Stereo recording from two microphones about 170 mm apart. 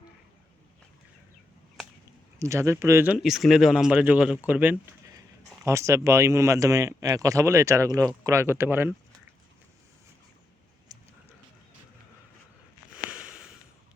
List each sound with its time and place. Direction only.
2.4 s speech: 15° right (ahead or behind)
10.9 s a sound: 20° right (ahead or behind)
13.1 s snort: 5° right (ahead or behind)